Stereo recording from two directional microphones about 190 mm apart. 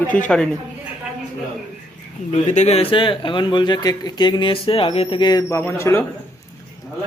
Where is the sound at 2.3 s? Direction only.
35° left (ahead or behind); by 6.0 s 15° left (ahead or behind).